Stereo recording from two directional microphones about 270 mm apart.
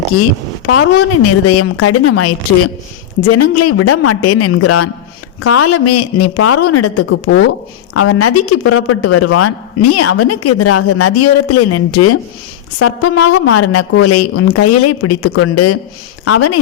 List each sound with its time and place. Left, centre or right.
0.7 s speech: left